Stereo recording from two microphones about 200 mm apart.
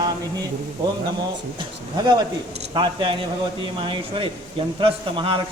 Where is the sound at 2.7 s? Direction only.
25° right (ahead or behind).